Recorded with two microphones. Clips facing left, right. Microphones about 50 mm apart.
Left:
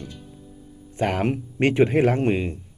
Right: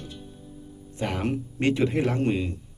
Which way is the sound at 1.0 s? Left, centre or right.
Left.